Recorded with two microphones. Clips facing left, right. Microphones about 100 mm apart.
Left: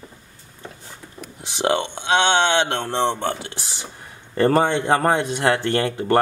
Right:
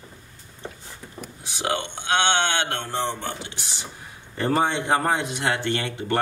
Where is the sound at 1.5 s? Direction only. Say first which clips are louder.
Left 6 dB; 30° left (ahead or behind).